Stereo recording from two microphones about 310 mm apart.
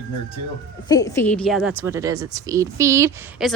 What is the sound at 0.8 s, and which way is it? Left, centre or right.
A woman's voice, centre.